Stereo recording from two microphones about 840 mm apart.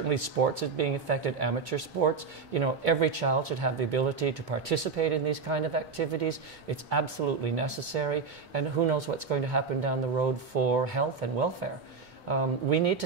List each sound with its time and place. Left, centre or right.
0.1 s speech: right